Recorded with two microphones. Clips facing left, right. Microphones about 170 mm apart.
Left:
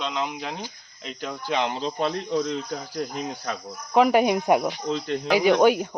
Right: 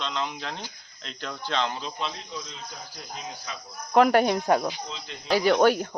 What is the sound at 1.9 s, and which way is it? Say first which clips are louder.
Cricket: left 10 dB; 55° left (ahead or behind).